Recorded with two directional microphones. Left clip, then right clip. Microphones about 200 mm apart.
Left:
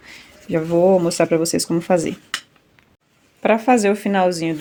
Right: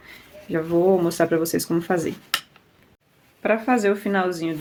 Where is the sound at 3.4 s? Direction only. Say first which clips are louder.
Left 5 dB; 40° left (ahead or behind).